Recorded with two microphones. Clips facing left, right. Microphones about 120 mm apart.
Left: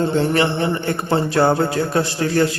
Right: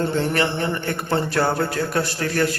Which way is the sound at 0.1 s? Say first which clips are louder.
Left 4 dB; 25° left (ahead or behind).